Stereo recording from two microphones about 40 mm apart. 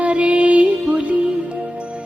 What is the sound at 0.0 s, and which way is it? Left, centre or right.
Music, right.